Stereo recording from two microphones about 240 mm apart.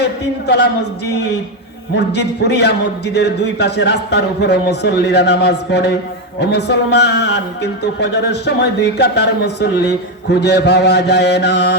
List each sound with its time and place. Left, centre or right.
0.0 s speech: left
2.0 s speech: left